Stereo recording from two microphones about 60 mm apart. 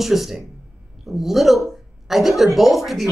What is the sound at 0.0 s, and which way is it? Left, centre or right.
Speech, centre.